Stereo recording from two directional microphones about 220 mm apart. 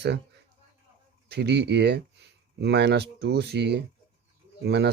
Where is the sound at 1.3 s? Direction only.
50° right (ahead or behind).